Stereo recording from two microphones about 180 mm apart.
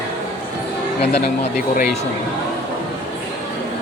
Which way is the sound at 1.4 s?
50° left (ahead or behind).